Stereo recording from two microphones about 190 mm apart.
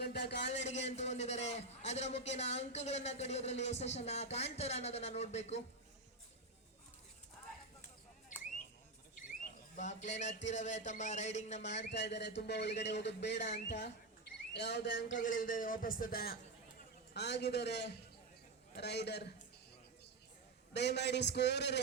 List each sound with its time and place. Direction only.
0.0 s a sound: 60° left (ahead or behind)
0.5 s a man's voice: 35° left (ahead or behind)
9.1 s speech: 40° left (ahead or behind)
11.9 s speech: 65° left (ahead or behind)
14.5 s a sound: 65° left (ahead or behind)
15.2 s a man's voice: 45° left (ahead or behind); by 19.3 s 60° left (ahead or behind)
20.7 s speech: 60° left (ahead or behind)